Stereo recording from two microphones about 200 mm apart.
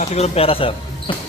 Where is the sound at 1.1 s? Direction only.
25° left (ahead or behind).